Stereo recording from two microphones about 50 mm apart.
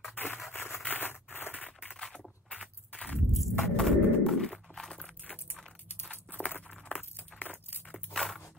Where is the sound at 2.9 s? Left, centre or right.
Left.